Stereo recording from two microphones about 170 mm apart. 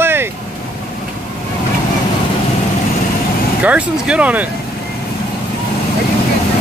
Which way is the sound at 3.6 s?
10° right (ahead or behind).